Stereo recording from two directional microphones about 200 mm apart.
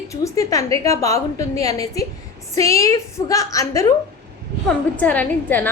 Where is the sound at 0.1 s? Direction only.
15° left (ahead or behind).